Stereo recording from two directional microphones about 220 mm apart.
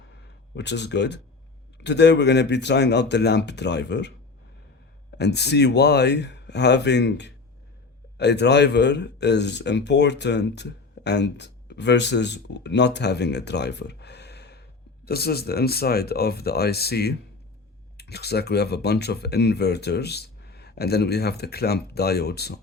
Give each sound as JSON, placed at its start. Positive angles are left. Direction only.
{"t": 0.5, "sound": "speech", "side_deg": 50}
{"t": 5.1, "sound": "speech", "side_deg": 50}